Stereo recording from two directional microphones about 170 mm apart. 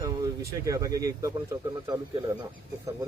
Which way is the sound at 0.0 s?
20° right (ahead or behind).